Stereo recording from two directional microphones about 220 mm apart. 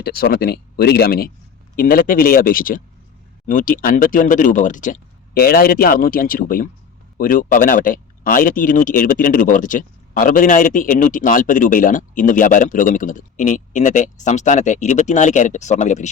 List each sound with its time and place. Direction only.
0.0 s speech: 45° left (ahead or behind)